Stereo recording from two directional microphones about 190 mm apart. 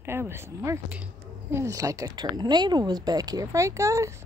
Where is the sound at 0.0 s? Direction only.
10° right (ahead or behind).